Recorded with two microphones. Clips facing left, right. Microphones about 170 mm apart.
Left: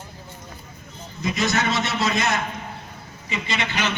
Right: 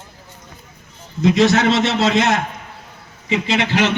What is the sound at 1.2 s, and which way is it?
A man's voice, 85° right.